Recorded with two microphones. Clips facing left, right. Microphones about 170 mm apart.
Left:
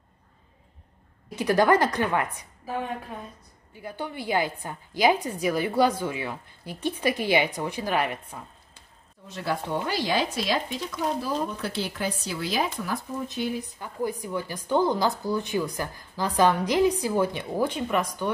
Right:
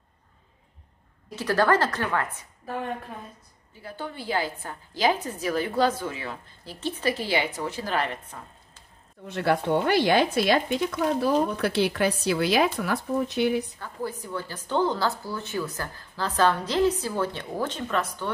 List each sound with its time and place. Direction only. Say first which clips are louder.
1.3 s a woman's voice: left 2 dB; 15° left (ahead or behind)
2.6 s a woman's voice: left 1 dB; centre (ahead or behind)
3.8 s a woman's voice: left 2 dB; 15° left (ahead or behind)
9.3 s speech: right 6 dB; 65° right (ahead or behind)
13.7 s a woman's voice: left 3 dB; 15° left (ahead or behind)